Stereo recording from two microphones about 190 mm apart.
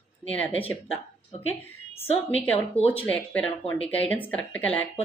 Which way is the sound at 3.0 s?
10° left (ahead or behind).